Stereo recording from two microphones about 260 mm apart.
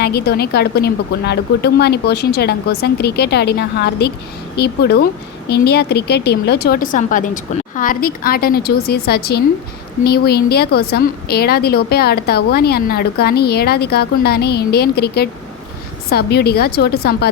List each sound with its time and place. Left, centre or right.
0.0 s a woman's voice: left